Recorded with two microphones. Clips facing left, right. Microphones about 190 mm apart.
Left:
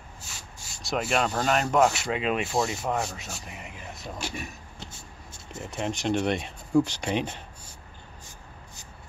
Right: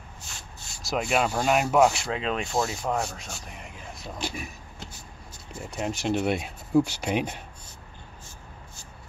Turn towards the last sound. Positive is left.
turn(degrees=-10)  # may be behind; listen again after turning